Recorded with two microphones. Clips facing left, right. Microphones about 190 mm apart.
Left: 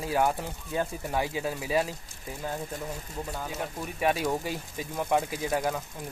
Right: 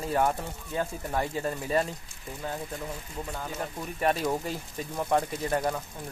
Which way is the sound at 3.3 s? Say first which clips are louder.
Even; 5° left (ahead or behind).